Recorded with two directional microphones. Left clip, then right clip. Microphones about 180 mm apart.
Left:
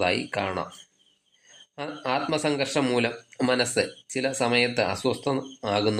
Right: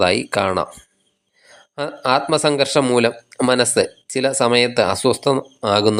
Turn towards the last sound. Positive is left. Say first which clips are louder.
# right 9 dB
turn(degrees=-30)  # may be behind; listen again after turning